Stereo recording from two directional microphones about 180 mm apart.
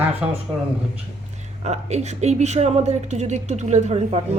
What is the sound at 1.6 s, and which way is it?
A woman's voice, 40° right (ahead or behind).